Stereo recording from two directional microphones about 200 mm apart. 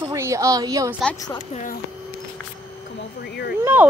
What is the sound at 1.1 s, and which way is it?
Speech, 20° left (ahead or behind).